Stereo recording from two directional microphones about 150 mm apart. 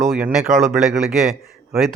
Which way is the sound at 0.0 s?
Centre (ahead or behind).